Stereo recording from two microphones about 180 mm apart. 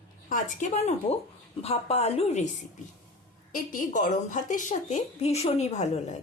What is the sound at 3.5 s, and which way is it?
A woman's voice, 50° left (ahead or behind).